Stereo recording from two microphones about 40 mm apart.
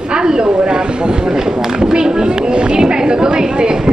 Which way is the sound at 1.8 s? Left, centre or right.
Centre.